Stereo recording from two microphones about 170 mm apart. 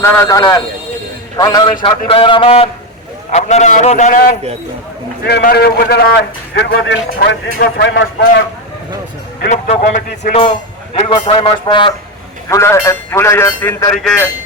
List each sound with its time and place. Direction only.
0.0 s a man's voice: 20° left (ahead or behind); by 4.4 s 50° left (ahead or behind)
5.2 s a man's voice: 70° left (ahead or behind); by 8.3 s 85° left
9.5 s a man's voice: 45° left (ahead or behind)
10.9 s a man's voice: 35° left (ahead or behind)
12.5 s speech: 15° left (ahead or behind)
13.9 s speech: 5° left (ahead or behind)